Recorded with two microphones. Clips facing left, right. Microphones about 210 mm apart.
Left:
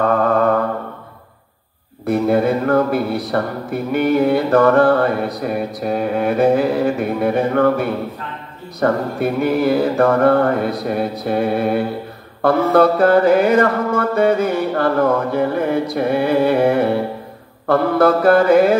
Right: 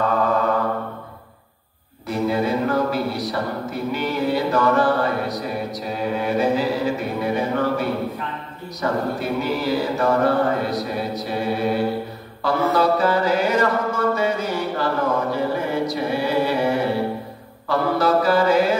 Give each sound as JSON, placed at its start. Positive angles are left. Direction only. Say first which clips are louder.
{"t": 2.0, "sound": "speech", "louder": "left 6 dB", "side_deg": 55}